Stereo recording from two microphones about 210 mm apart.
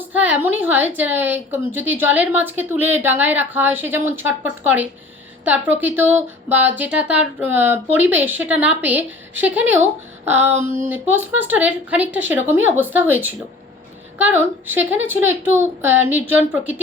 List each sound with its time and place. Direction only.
0.1 s speech: 10° right (ahead or behind)
14.2 s speech: 10° right (ahead or behind)